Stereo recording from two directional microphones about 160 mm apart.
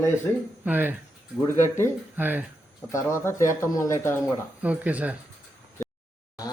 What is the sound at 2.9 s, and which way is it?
Speech, 15° left (ahead or behind).